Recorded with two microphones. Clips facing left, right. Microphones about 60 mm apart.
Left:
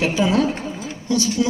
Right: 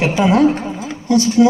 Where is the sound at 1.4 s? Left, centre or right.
Centre.